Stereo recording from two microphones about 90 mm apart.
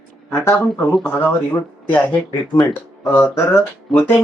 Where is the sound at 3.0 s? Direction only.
30° left (ahead or behind).